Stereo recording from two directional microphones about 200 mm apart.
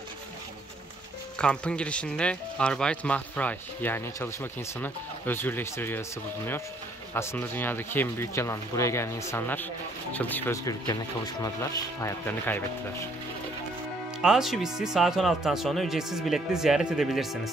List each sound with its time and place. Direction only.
1.4 s speech: 5° left (ahead or behind)
14.2 s speech: centre (ahead or behind)